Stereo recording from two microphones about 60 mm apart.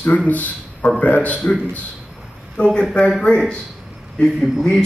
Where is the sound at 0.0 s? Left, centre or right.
Left.